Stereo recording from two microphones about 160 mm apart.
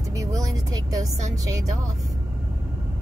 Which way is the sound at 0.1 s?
20° right (ahead or behind).